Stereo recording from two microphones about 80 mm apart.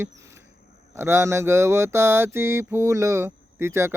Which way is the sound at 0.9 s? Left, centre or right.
Right.